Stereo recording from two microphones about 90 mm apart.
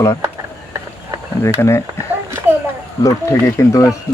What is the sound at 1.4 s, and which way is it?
Speech, 30° left (ahead or behind).